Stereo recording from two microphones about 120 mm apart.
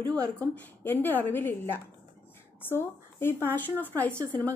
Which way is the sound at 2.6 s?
20° left (ahead or behind).